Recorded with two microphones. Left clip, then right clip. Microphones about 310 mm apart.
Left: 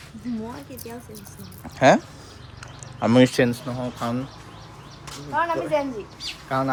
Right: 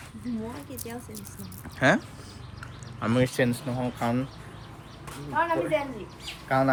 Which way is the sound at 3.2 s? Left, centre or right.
Left.